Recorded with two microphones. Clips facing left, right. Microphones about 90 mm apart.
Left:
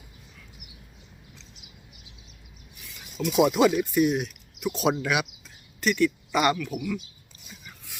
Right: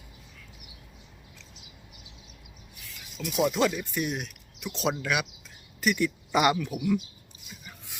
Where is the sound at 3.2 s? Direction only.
90° left.